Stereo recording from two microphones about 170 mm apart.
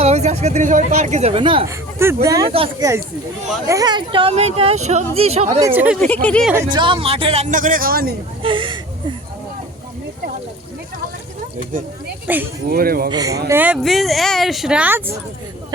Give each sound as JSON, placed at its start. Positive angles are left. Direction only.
{"t": 0.0, "sound": "a woman's voice", "side_deg": -40}
{"t": 1.6, "sound": "speech", "side_deg": -15}
{"t": 5.5, "sound": "speech", "side_deg": -15}
{"t": 6.0, "sound": "speech", "side_deg": 10}
{"t": 6.7, "sound": "speech", "side_deg": -30}
{"t": 8.4, "sound": "a sound", "side_deg": -30}
{"t": 12.3, "sound": "speech", "side_deg": -10}
{"t": 12.7, "sound": "speech", "side_deg": -60}
{"t": 13.1, "sound": "speech", "side_deg": -20}
{"t": 13.5, "sound": "speech", "side_deg": -10}
{"t": 13.8, "sound": "speech", "side_deg": 0}